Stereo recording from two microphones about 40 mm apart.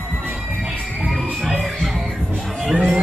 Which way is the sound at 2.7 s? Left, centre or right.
Right.